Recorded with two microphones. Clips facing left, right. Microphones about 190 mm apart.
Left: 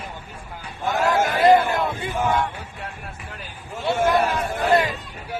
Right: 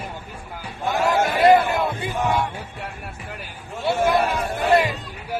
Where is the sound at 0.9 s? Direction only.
Centre (ahead or behind).